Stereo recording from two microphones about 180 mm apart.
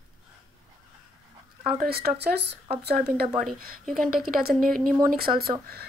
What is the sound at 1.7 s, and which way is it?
Speech, 60° right (ahead or behind).